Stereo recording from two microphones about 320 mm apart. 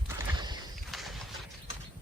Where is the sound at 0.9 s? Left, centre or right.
Centre.